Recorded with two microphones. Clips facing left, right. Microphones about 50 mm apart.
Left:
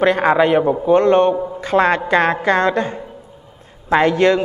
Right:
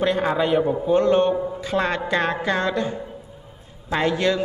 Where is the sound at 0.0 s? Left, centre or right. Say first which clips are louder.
Left 7 dB; left.